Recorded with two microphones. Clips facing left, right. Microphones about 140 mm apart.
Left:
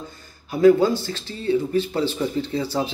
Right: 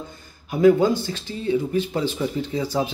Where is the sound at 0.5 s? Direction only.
20° right (ahead or behind).